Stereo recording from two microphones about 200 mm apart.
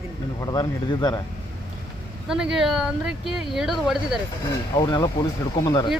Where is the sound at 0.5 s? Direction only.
20° left (ahead or behind).